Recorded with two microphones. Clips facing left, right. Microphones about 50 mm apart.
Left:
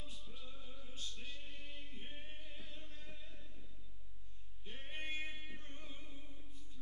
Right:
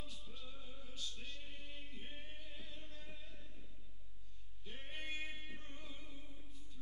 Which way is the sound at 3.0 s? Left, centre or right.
Centre.